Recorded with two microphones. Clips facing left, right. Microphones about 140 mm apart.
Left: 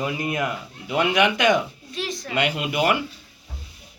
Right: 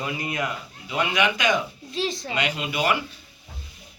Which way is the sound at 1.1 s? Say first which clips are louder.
Left 4 dB; 60° left (ahead or behind).